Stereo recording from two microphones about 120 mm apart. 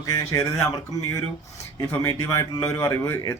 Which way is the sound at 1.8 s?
25° left (ahead or behind).